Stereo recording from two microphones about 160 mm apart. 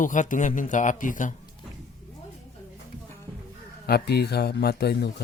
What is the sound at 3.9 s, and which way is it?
Speech, 90° left.